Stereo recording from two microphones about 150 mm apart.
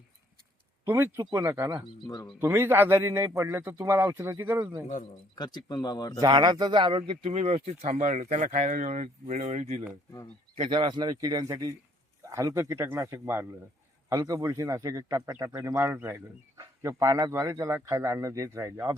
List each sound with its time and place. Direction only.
0.9 s speech: 15° right (ahead or behind)
2.0 s speech: 25° left (ahead or behind)
2.4 s speech: 15° right (ahead or behind)
5.3 s speech: 30° left (ahead or behind)
6.1 s speech: 25° right (ahead or behind); by 9.7 s 50° right (ahead or behind)
10.6 s speech: 30° right (ahead or behind)